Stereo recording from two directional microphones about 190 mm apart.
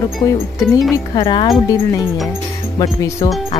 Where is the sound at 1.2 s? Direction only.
25° left (ahead or behind).